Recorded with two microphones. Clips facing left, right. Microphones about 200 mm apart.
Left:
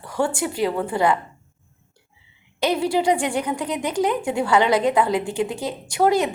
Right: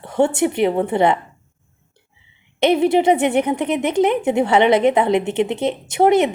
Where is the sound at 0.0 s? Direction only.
25° right (ahead or behind).